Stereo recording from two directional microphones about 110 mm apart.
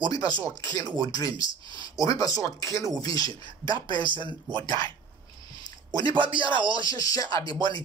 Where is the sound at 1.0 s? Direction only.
35° left (ahead or behind).